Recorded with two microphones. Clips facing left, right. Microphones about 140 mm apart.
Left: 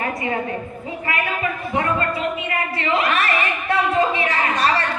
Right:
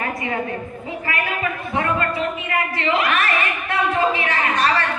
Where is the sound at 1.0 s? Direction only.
25° left (ahead or behind).